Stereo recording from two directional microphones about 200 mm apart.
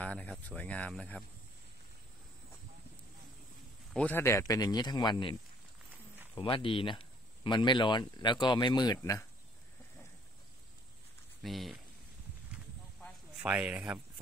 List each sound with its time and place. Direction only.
0.0 s speech: 5° left (ahead or behind)
3.9 s speech: 10° left (ahead or behind)
11.4 s speech: centre (ahead or behind)
13.4 s speech: 5° right (ahead or behind)